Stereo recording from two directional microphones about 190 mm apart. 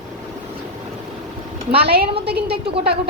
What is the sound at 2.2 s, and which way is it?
Speech, 55° right (ahead or behind).